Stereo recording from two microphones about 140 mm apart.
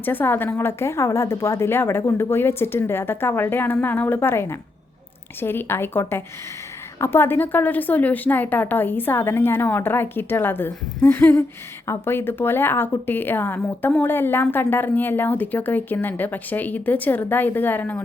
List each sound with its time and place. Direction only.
0.0 s speech: 15° left (ahead or behind)